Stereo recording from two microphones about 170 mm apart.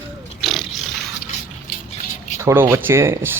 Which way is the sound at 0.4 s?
Centre (ahead or behind).